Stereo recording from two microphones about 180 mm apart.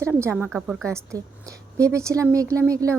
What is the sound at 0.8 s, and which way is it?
A woman's voice, 15° right (ahead or behind).